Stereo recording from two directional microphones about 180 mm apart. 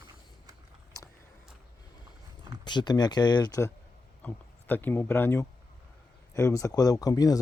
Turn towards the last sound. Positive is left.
turn(degrees=20)  # may be behind; listen again after turning